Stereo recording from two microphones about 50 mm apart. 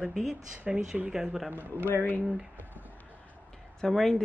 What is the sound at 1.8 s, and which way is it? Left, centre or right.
Speech, left.